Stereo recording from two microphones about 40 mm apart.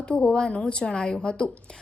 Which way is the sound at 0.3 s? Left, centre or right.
Left.